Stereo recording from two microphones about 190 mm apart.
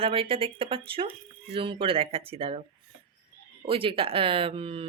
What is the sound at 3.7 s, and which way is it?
Speech, 30° right (ahead or behind).